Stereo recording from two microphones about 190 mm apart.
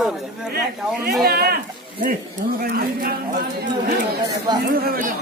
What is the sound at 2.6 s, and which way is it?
Speech, 50° right (ahead or behind).